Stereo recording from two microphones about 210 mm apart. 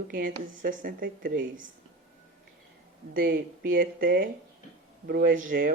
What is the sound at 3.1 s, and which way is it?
Speech, 45° right (ahead or behind).